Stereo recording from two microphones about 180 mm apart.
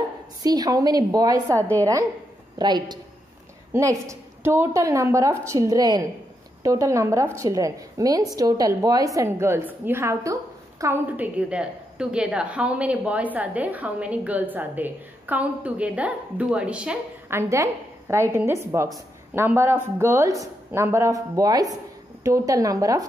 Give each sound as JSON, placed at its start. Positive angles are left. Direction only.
{"t": 0.4, "sound": "a woman's voice", "side_deg": -20}